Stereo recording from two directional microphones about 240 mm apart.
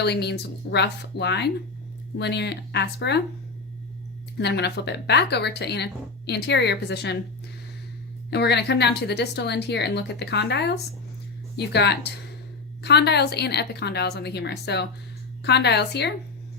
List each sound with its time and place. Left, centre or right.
0.0 s speech: left
4.4 s speech: left
8.3 s speech: left